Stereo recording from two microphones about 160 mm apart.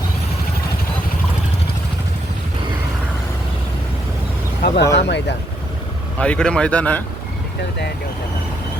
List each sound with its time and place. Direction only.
4.6 s vehicle: 90° left
4.9 s speech: 90° left
6.1 s speech: 5° left (ahead or behind)